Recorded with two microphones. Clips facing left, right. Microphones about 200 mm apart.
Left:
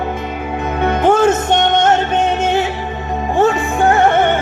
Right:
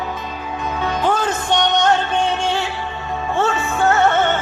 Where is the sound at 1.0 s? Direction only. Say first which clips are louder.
Left 9 dB; 25° left (ahead or behind).